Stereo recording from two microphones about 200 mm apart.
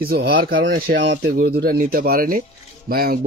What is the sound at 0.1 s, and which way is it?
Speech, 50° right (ahead or behind).